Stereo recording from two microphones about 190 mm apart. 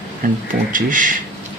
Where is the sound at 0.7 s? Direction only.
45° right (ahead or behind).